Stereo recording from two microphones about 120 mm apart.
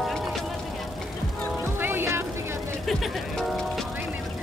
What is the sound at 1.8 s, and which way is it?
Vehicle, 20° right (ahead or behind).